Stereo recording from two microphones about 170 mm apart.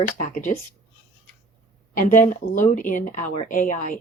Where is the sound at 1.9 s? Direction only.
50° left (ahead or behind).